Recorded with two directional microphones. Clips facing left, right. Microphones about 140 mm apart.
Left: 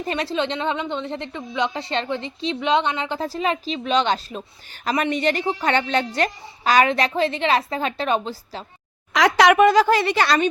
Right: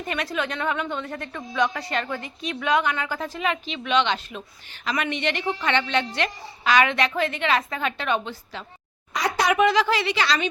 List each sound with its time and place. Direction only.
0.0 s a woman's voice: 30° left (ahead or behind)
9.1 s speech: 90° left
9.6 s speech: 45° left (ahead or behind)